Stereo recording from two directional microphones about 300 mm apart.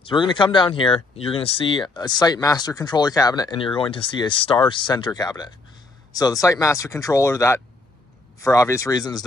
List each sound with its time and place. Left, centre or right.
0.0 s speech: centre